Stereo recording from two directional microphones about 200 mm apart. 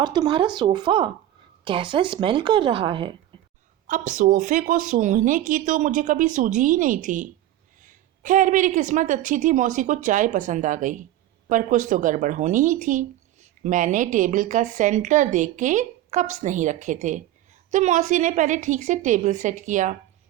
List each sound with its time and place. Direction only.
0.0 s speech: 20° right (ahead or behind)
3.8 s speech: 40° right (ahead or behind)